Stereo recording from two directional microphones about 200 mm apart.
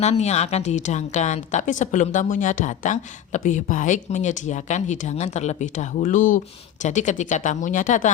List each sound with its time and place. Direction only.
0.0 s a woman's voice: 35° left (ahead or behind)